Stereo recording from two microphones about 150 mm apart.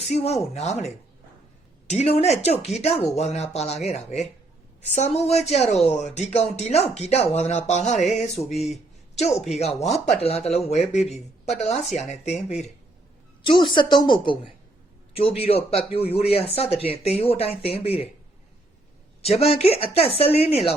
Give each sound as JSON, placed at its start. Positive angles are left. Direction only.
{"t": 0.1, "sound": "speech", "side_deg": 45}
{"t": 1.9, "sound": "speech", "side_deg": 45}
{"t": 13.4, "sound": "speech", "side_deg": 35}
{"t": 19.2, "sound": "speech", "side_deg": 45}